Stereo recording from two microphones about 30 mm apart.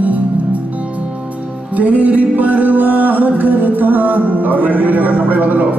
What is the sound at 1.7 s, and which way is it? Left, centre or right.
Music, right.